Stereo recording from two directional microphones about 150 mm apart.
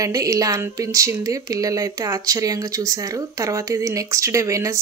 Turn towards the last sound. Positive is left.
turn(degrees=-20)  # may be behind; listen again after turning